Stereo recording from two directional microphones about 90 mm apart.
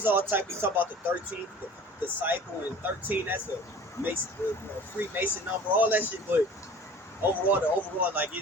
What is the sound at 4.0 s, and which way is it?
Speech, 30° left (ahead or behind).